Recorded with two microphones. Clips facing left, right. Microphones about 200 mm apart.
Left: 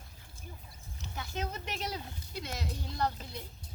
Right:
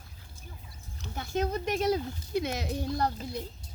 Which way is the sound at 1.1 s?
45° right (ahead or behind).